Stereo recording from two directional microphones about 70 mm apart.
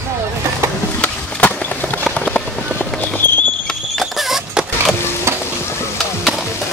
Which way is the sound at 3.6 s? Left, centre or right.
Centre.